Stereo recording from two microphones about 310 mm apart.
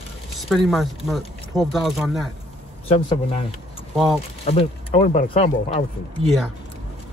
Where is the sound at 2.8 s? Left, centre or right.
Centre.